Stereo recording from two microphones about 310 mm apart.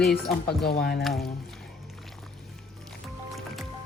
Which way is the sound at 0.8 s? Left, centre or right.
Left.